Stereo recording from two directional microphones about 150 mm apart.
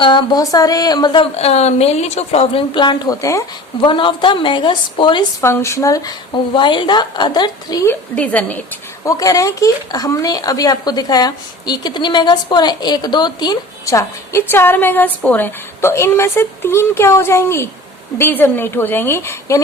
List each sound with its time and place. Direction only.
0.0 s speech: 30° left (ahead or behind)
3.8 s speech: 35° left (ahead or behind)
5.4 s speech: 20° left (ahead or behind)
7.9 s a woman's voice: 10° left (ahead or behind)
9.0 s a woman's voice: 25° left (ahead or behind)